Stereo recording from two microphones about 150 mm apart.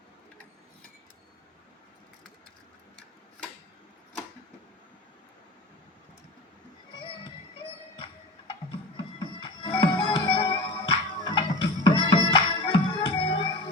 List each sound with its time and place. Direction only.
7.9 s music: 35° left (ahead or behind)